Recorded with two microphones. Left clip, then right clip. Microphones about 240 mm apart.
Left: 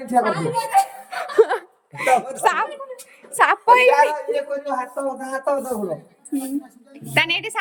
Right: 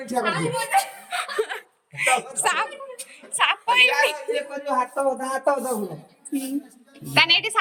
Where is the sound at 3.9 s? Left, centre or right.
Left.